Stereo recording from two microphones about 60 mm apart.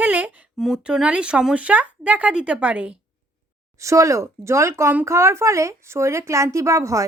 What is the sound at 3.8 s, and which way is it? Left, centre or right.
Speech, right.